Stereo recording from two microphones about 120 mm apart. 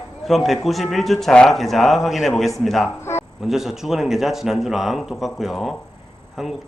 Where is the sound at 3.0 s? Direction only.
20° left (ahead or behind).